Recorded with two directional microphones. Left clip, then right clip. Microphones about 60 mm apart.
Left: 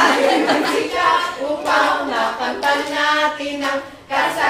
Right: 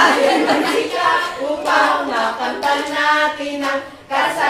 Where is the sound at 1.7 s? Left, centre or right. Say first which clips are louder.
Right 1 dB; centre.